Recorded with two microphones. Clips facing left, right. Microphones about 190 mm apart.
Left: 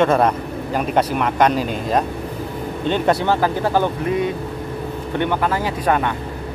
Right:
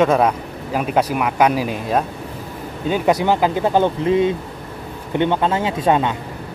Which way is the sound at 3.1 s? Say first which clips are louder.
Right 1 dB; 15° right (ahead or behind).